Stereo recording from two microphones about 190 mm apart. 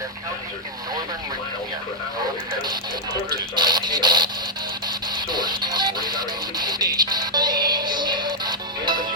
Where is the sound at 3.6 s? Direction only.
20° right (ahead or behind).